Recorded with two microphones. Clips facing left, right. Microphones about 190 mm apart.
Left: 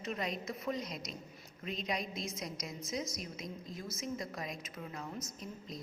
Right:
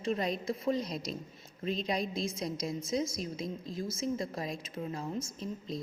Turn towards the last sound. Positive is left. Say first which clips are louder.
# right 7 dB
turn(degrees=-30)  # may be behind; listen again after turning